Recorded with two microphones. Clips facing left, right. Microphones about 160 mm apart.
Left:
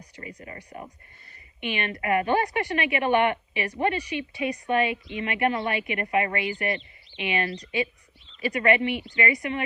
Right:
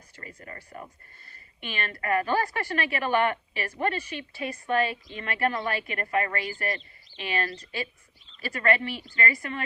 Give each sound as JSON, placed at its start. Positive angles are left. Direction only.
{"t": 0.2, "sound": "speech", "side_deg": 20}
{"t": 1.6, "sound": "a woman's voice", "side_deg": 20}